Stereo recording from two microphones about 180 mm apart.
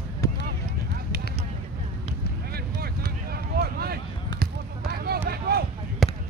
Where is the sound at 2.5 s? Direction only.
60° right (ahead or behind).